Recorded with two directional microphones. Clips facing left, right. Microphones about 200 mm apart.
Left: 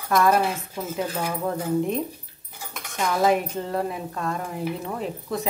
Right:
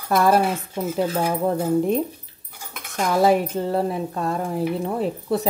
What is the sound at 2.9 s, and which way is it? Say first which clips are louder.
Speech: right 3 dB; 35° right (ahead or behind).